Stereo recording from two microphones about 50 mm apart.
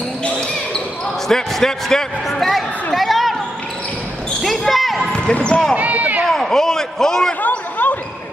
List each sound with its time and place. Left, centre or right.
1.3 s speech: centre
2.3 s a sound: centre
4.4 s basketball bounce: centre
5.3 s speech: centre
5.8 s basketball bounce: right
6.2 s a sound: centre
7.4 s basketball bounce: left